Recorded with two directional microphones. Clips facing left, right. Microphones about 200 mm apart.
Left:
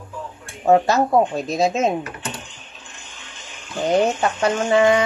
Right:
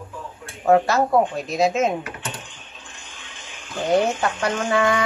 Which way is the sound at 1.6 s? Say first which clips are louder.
Even; 25° left (ahead or behind).